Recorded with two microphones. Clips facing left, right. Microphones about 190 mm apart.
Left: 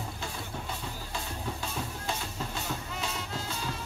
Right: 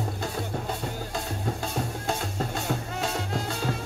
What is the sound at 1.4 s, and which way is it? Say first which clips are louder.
Music: right 7 dB; 45° right (ahead or behind).